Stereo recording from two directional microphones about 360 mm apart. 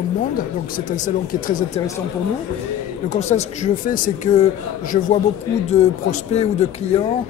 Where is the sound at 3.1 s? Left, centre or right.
Centre.